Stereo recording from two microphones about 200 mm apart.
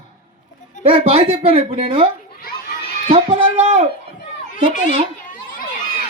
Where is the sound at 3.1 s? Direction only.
30° right (ahead or behind).